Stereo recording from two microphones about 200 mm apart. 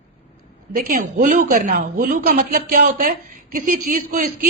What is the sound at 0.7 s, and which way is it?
Speech, 40° right (ahead or behind).